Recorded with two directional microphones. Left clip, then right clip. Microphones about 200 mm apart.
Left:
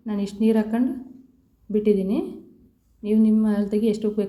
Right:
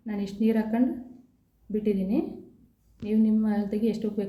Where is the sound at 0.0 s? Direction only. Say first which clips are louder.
Left 5 dB; 15° left (ahead or behind).